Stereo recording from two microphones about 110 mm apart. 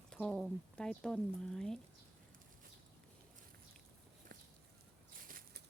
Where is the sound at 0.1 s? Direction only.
5° left (ahead or behind).